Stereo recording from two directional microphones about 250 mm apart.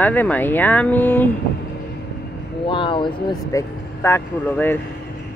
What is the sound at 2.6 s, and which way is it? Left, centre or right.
Speech, centre.